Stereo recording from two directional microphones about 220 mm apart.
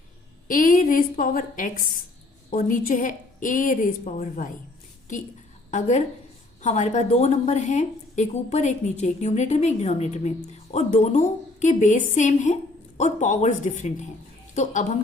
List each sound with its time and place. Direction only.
0.4 s a woman's voice: 40° left (ahead or behind)
5.7 s a woman's voice: 35° left (ahead or behind)